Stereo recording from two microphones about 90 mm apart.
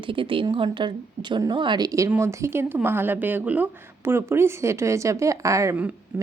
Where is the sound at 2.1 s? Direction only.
30° right (ahead or behind).